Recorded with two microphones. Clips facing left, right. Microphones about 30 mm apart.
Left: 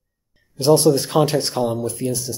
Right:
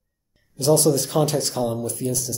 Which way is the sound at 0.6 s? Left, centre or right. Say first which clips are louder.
Left 4 dB; left.